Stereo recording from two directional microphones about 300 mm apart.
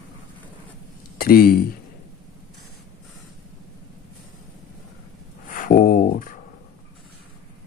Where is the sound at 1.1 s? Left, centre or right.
Left.